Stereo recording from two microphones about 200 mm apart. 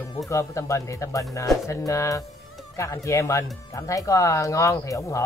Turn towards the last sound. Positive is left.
turn(degrees=15)  # may be behind; listen again after turning